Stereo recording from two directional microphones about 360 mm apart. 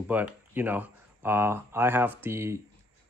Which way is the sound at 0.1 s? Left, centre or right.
Centre.